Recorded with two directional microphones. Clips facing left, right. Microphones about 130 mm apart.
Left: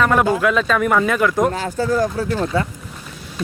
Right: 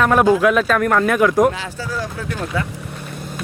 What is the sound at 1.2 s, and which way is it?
Speech, 15° right (ahead or behind).